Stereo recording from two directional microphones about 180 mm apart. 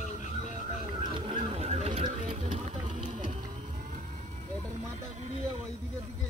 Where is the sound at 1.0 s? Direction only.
30° right (ahead or behind).